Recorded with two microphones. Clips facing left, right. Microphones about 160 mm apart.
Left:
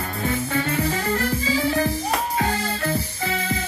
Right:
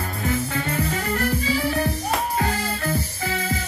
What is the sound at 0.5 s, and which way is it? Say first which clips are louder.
Music: left 2 dB; 30° left (ahead or behind).